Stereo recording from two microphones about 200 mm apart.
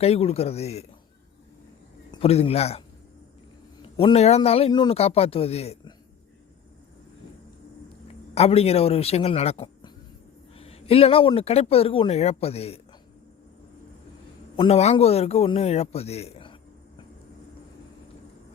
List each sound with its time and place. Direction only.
0.0 s a man's voice: 30° left (ahead or behind)
2.2 s a man's voice: 30° left (ahead or behind)
3.9 s a man's voice: 30° left (ahead or behind)
8.4 s a man's voice: 30° left (ahead or behind)
14.5 s a man's voice: 30° left (ahead or behind)